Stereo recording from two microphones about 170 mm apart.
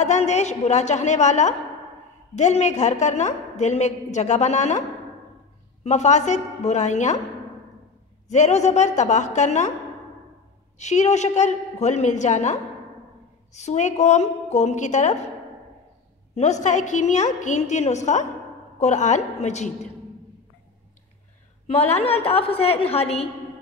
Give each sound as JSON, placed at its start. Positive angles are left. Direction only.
{"t": 0.0, "sound": "a woman's voice", "side_deg": 45}
{"t": 5.9, "sound": "a woman's voice", "side_deg": 40}
{"t": 8.3, "sound": "a woman's voice", "side_deg": 40}
{"t": 10.8, "sound": "a woman's voice", "side_deg": 45}
{"t": 16.3, "sound": "a woman's voice", "side_deg": 45}
{"t": 21.6, "sound": "a woman's voice", "side_deg": 35}